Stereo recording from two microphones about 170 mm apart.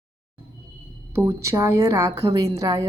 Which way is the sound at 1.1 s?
15° right (ahead or behind).